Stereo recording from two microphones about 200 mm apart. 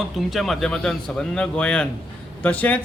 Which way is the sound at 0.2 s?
Centre (ahead or behind).